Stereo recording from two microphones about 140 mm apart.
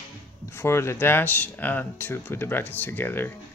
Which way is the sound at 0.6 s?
20° left (ahead or behind).